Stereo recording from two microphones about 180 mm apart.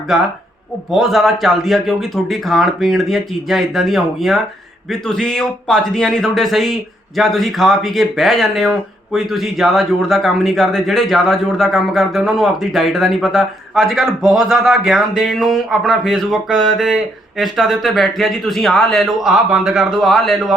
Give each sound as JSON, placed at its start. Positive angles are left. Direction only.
{"t": 0.9, "sound": "a man's voice", "side_deg": 0}